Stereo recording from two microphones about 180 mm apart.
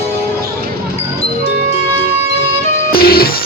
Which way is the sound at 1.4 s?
35° left (ahead or behind).